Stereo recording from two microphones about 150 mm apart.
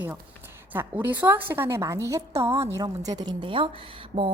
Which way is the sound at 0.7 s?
15° right (ahead or behind).